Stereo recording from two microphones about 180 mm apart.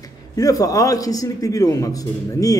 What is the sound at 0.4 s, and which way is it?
A man's voice, 20° left (ahead or behind).